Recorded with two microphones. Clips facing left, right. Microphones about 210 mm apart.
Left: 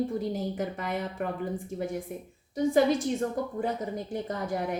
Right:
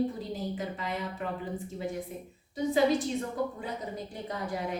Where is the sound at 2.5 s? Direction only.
50° left (ahead or behind).